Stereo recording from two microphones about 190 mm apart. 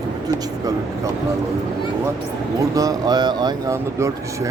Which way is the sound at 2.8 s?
20° right (ahead or behind).